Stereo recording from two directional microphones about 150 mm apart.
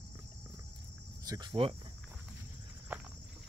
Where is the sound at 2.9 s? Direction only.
10° right (ahead or behind).